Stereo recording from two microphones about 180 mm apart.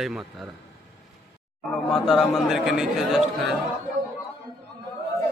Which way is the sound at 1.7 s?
Centre (ahead or behind).